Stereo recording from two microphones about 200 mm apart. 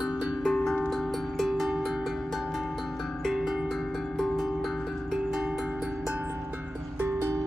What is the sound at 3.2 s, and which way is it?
Music, centre (ahead or behind).